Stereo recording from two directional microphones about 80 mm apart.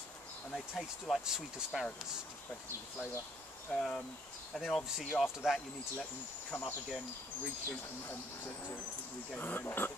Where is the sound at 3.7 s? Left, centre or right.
Centre.